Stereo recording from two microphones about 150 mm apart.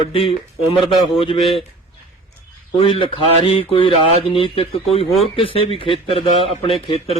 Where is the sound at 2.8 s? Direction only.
40° left (ahead or behind).